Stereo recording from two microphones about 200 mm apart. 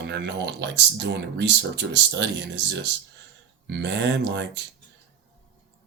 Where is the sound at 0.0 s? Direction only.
60° right (ahead or behind).